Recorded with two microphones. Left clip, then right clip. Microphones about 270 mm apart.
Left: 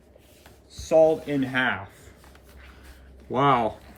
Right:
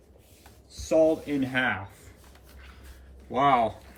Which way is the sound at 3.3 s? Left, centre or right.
Centre.